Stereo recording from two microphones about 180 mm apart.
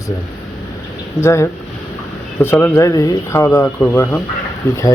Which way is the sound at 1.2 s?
15° left (ahead or behind).